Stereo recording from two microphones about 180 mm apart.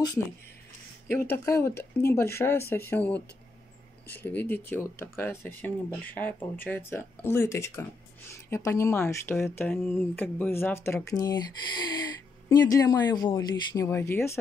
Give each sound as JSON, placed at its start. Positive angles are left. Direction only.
{"t": 1.1, "sound": "speech", "side_deg": 15}
{"t": 12.4, "sound": "speech", "side_deg": 20}